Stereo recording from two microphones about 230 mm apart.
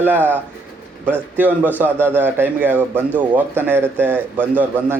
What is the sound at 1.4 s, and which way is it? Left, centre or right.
Speech, centre.